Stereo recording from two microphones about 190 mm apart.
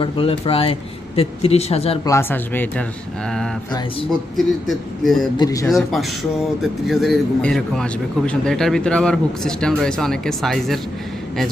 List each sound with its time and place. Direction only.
0.0 s speech: 30° left (ahead or behind)
2.0 s speech: 10° left (ahead or behind)
4.4 s speech: centre (ahead or behind)
5.4 s speech: 20° left (ahead or behind)
5.6 s speech: centre (ahead or behind)